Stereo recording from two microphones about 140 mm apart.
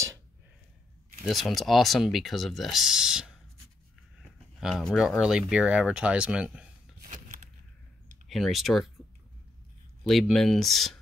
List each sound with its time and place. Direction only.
1.2 s speech: centre (ahead or behind)
4.6 s speech: 5° right (ahead or behind)
7.0 s a sound: 75° right (ahead or behind)
8.3 s speech: centre (ahead or behind)
10.0 s speech: centre (ahead or behind)